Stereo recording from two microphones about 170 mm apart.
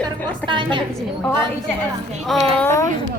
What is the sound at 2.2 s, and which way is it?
Speech, centre (ahead or behind).